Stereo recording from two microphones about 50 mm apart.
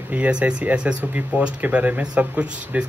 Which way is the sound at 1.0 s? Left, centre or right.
Right.